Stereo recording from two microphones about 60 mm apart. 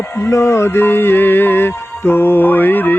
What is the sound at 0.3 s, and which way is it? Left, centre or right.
Music, left.